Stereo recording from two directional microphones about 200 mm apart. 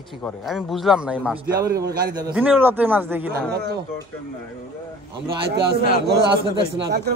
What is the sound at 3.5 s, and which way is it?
Speech, 55° right (ahead or behind).